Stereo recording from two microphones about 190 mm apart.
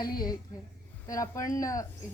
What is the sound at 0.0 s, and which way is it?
A woman's voice, 20° left (ahead or behind).